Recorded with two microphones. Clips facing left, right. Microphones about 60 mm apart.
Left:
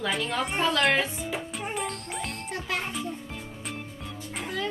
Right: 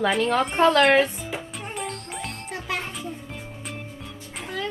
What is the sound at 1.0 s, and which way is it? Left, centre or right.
Music, centre.